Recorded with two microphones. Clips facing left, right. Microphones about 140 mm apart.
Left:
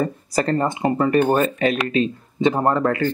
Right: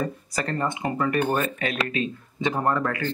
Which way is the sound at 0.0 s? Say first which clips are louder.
Left 7 dB; 35° left (ahead or behind).